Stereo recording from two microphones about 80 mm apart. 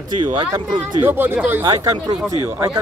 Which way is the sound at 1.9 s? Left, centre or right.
Right.